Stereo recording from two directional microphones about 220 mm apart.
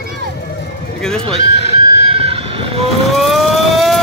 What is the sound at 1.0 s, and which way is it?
Neigh, 5° left (ahead or behind).